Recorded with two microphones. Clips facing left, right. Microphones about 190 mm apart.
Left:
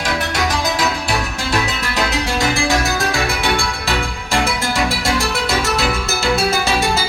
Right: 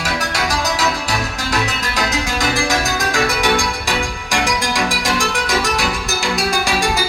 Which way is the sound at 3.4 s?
15° right (ahead or behind).